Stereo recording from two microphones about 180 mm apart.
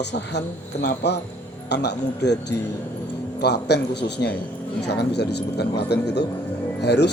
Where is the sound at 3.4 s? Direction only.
65° left (ahead or behind).